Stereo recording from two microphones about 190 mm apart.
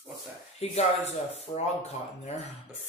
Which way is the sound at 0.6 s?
35° left (ahead or behind).